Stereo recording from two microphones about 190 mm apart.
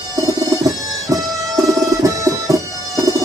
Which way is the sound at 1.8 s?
15° right (ahead or behind).